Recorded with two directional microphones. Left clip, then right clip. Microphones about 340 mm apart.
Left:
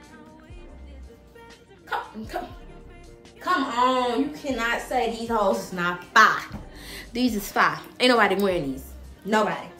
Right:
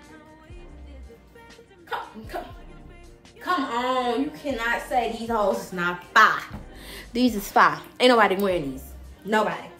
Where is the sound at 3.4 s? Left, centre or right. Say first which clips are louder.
Left 3 dB; centre.